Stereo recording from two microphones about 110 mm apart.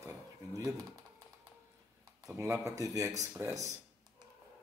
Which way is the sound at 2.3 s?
30° right (ahead or behind).